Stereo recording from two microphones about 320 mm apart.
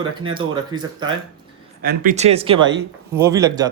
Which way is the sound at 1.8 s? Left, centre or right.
Right.